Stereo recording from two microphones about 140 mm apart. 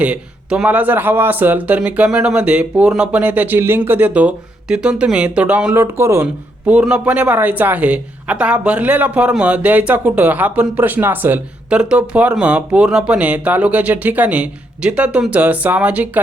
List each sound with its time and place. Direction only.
0.0 s a woman's voice: 10° right (ahead or behind)